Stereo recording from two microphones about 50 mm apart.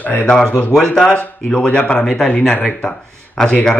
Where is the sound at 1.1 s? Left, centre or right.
Left.